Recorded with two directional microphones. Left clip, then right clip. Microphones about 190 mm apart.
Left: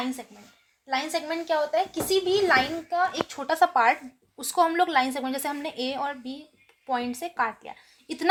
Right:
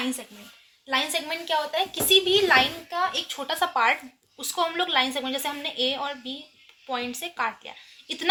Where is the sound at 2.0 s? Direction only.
55° left (ahead or behind).